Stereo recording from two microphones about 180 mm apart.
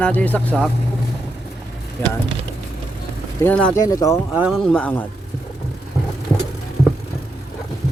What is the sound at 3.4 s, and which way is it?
Speech, 5° left (ahead or behind).